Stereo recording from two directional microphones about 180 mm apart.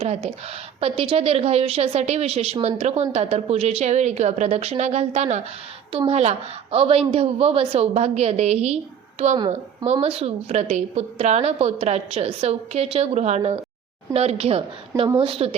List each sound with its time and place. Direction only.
0.0 s a woman's voice: 35° right (ahead or behind)